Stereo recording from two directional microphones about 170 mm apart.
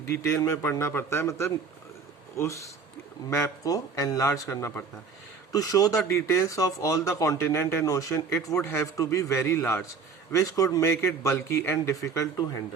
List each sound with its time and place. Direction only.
0.0 s speech: 15° left (ahead or behind)